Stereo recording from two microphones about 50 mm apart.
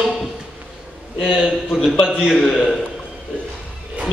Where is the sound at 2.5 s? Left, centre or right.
Centre.